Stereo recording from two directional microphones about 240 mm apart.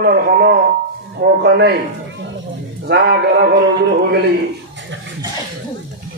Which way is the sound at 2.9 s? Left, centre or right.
Right.